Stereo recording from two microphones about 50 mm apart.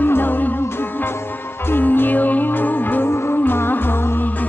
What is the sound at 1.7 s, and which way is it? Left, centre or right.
Music, left.